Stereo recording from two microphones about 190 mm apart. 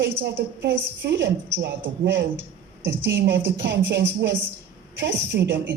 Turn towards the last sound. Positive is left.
turn(degrees=-65)  # may be behind; listen again after turning